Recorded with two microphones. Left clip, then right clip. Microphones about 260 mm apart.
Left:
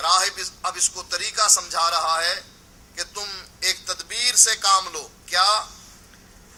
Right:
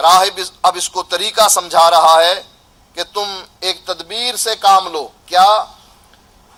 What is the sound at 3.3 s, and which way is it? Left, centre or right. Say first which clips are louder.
A man's voice: right 5 dB; right.